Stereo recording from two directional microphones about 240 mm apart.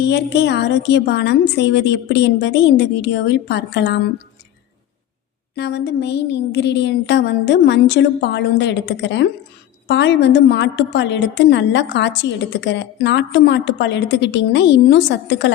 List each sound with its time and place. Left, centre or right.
0.1 s a woman's voice: left
5.5 s a woman's voice: left